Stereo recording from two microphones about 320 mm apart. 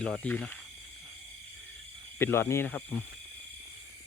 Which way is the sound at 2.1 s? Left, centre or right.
Centre.